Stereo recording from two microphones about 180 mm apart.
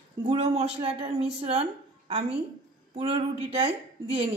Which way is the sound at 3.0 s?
30° right (ahead or behind).